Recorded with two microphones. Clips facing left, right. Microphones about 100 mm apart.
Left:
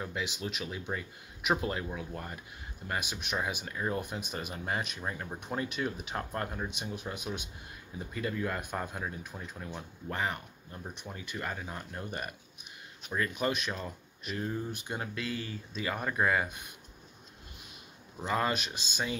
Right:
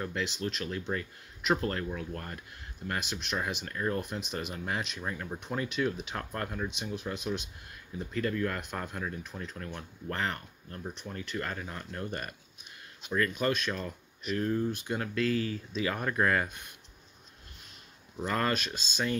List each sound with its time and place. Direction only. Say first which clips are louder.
0.0 s speech: right 3 dB; 5° left (ahead or behind)
6.8 s speech: right 3 dB; 5° left (ahead or behind)
18.2 s speech: right 1 dB; 15° left (ahead or behind)